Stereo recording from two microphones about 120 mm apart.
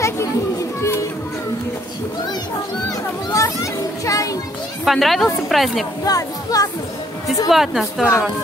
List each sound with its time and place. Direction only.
0.0 s children playing: 25° left (ahead or behind)
3.3 s children playing: 25° left (ahead or behind)
4.8 s a woman's voice: centre (ahead or behind)
6.0 s speech: 30° left (ahead or behind)
7.4 s a woman's voice: centre (ahead or behind)